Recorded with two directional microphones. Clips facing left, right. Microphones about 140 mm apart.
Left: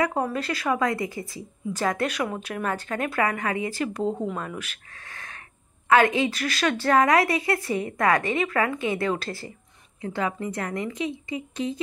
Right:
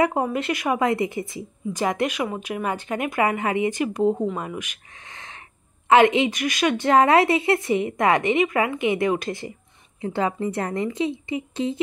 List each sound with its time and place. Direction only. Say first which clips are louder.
0.0 s a woman's voice: right 3 dB; 20° right (ahead or behind)
6.9 s a woman's voice: right 3 dB; 30° right (ahead or behind)
10.0 s a woman's voice: right 4 dB; 30° right (ahead or behind)